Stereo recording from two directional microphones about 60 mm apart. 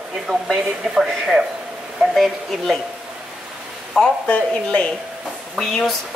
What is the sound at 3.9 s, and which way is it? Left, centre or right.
Speech, centre.